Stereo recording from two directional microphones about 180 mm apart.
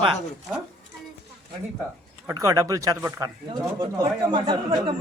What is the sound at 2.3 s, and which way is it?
Speech, 15° right (ahead or behind).